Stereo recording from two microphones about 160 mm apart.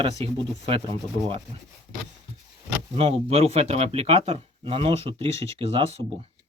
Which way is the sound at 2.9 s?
40° right (ahead or behind).